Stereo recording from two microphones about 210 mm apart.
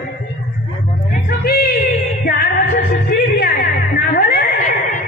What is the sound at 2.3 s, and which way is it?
Music, 50° left (ahead or behind).